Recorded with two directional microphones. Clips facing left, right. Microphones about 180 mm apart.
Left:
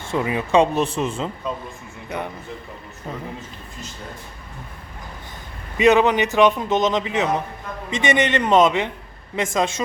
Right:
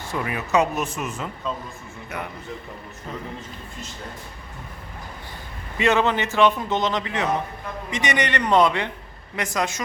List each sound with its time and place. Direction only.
0.0 s speech: 25° left (ahead or behind)
5.7 s a man's voice: 15° left (ahead or behind)